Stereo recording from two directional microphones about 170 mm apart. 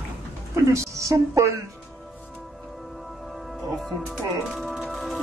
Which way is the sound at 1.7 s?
Centre (ahead or behind).